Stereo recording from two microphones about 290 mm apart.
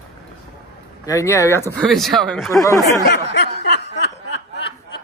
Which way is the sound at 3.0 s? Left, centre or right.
Left.